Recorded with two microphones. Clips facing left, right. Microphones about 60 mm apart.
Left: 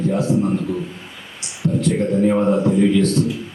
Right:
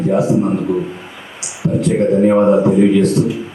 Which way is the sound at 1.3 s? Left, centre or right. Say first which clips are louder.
Right 3 dB; centre.